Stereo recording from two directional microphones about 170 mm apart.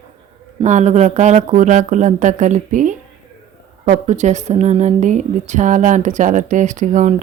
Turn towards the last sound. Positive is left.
turn(degrees=-45)  # may be behind; listen again after turning